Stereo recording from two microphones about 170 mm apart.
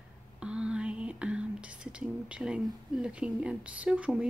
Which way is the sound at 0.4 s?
5° right (ahead or behind).